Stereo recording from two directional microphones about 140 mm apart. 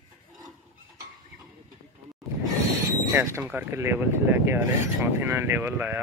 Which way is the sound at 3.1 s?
20° right (ahead or behind).